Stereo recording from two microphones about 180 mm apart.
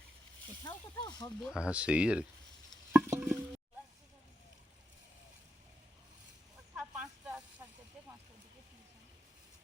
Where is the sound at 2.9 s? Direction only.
10° right (ahead or behind).